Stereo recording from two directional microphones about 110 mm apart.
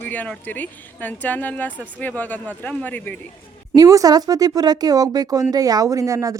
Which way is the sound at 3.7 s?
35° right (ahead or behind).